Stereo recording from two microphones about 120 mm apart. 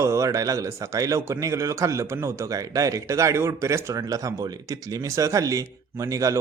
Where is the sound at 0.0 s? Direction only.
25° right (ahead or behind).